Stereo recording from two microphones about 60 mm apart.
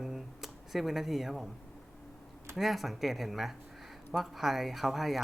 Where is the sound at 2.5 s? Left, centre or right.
Centre.